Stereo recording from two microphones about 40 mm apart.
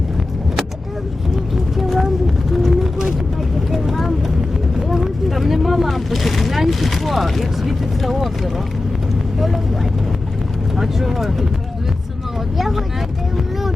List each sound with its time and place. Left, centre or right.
1.7 s a sound: centre
3.7 s vehicle: centre
10.8 s vehicle: centre
12.5 s vehicle: centre